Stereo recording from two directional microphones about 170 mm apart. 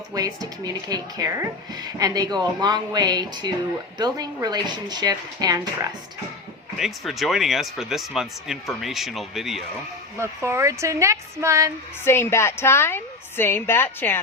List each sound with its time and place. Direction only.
0.1 s speech: 20° right (ahead or behind)
6.7 s speech: centre (ahead or behind)
10.2 s a woman's voice: 15° right (ahead or behind)
12.0 s a woman's voice: 15° left (ahead or behind)